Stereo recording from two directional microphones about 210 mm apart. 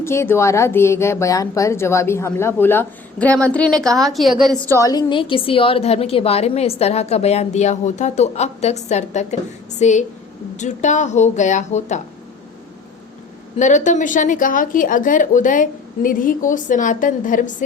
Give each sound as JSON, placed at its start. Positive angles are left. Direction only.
{"t": 0.0, "sound": "a woman's voice", "side_deg": 10}
{"t": 4.7, "sound": "a woman's voice", "side_deg": 15}
{"t": 13.6, "sound": "a woman's voice", "side_deg": 35}